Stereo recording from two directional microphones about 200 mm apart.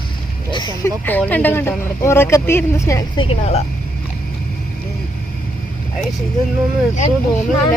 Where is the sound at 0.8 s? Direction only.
10° left (ahead or behind).